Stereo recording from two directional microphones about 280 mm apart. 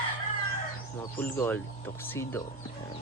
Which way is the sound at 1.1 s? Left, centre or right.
Centre.